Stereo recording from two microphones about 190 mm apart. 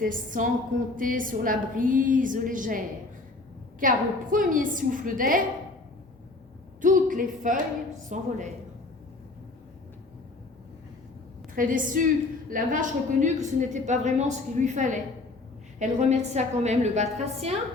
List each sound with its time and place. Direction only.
0.0 s a woman's voice: 45° right (ahead or behind)
6.8 s a sound: 45° right (ahead or behind)
8.1 s a woman's voice: 40° right (ahead or behind)
11.5 s a woman's voice: 45° right (ahead or behind)